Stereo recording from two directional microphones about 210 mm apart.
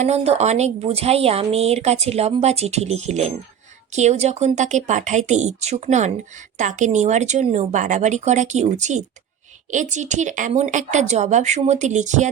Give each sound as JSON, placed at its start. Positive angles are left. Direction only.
{"t": 0.0, "sound": "a woman's voice", "side_deg": -30}